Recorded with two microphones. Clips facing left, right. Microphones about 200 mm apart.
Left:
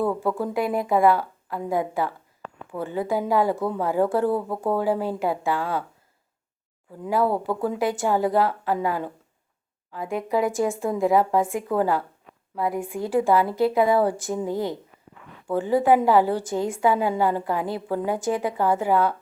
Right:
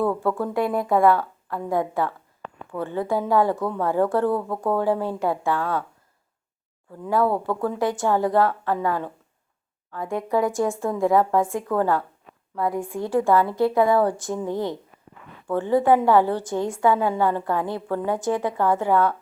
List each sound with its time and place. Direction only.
0.2 s a woman's voice: 15° left (ahead or behind)
0.9 s a woman's voice: 5° left (ahead or behind)
4.3 s speech: 25° left (ahead or behind)
4.8 s a woman's voice: 5° left (ahead or behind)
7.0 s a woman's voice: 10° left (ahead or behind)